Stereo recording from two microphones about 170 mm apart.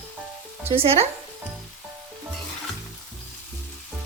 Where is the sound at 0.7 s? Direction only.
35° right (ahead or behind).